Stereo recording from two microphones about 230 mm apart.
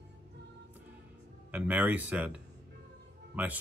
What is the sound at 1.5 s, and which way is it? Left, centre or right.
Speech, centre.